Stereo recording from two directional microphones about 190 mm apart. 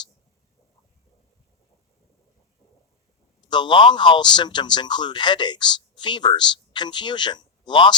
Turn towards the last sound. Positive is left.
turn(degrees=25)  # may be behind; listen again after turning